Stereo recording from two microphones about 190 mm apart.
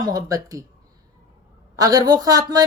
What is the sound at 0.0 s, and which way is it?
Speech, 20° right (ahead or behind).